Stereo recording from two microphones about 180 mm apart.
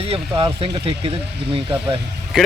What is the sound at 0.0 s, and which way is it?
Speech, 35° right (ahead or behind).